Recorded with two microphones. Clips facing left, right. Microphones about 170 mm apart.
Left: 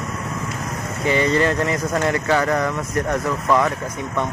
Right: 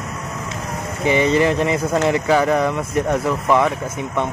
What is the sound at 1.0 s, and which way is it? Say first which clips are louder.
Speech: right 2 dB; 15° right (ahead or behind).